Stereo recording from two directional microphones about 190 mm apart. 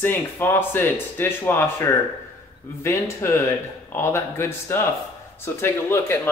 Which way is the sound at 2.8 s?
15° left (ahead or behind).